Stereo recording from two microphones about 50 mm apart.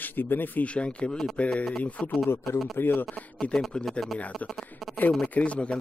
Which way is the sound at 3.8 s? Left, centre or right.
Centre.